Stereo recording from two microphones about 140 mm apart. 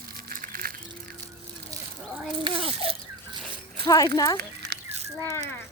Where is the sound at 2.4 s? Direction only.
40° right (ahead or behind).